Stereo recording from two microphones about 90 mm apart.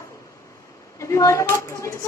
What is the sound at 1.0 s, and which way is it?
A woman's voice, 35° left (ahead or behind).